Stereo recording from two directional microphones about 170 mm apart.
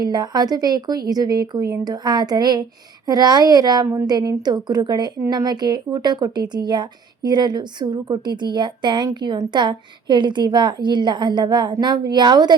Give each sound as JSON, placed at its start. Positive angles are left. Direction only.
{"t": 0.0, "sound": "speech", "side_deg": -25}